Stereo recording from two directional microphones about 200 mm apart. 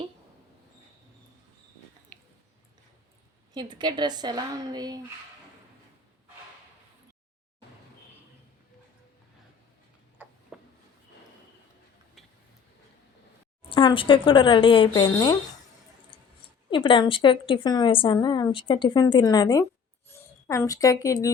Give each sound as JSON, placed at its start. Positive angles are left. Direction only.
{"t": 2.1, "sound": "chewing", "side_deg": 5}
{"t": 3.5, "sound": "a woman's voice", "side_deg": -20}
{"t": 10.2, "sound": "a sound", "side_deg": -10}
{"t": 13.7, "sound": "a woman's voice", "side_deg": 25}
{"t": 16.6, "sound": "a woman's voice", "side_deg": 25}